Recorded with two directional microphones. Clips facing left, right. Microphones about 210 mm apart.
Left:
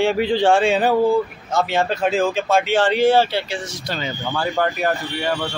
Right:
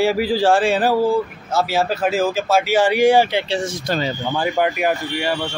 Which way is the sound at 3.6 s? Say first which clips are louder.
Right 6 dB; 50° right (ahead or behind).